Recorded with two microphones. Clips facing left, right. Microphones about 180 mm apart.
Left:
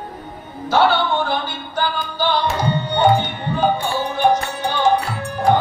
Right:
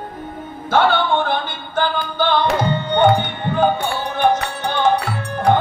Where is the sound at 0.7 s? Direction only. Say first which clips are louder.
Even; 50° right (ahead or behind).